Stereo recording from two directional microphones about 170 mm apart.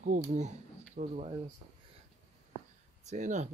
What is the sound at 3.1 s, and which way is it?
Speech, 45° right (ahead or behind).